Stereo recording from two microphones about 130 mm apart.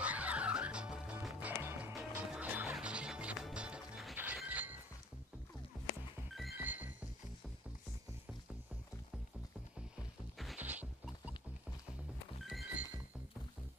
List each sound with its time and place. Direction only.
0.0 s music: 10° right (ahead or behind)
1.6 s music: 20° right (ahead or behind)
6.6 s music: 15° right (ahead or behind)
10.3 s music: centre (ahead or behind)
10.6 s music: 10° right (ahead or behind)
12.4 s music: 5° right (ahead or behind)